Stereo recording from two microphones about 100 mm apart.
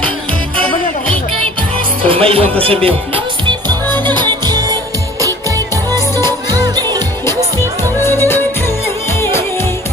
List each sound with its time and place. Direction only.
2.0 s speech: 70° right (ahead or behind)
3.8 s music: 20° left (ahead or behind)
4.1 s music: 45° right (ahead or behind)
8.0 s music: 25° left (ahead or behind)